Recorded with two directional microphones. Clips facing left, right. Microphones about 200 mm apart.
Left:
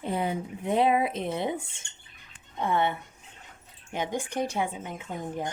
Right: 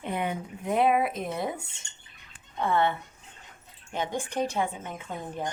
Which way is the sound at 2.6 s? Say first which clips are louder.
Right 1 dB; 15° left (ahead or behind).